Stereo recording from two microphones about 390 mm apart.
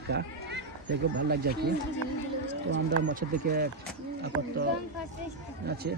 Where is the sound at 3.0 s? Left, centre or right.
Right.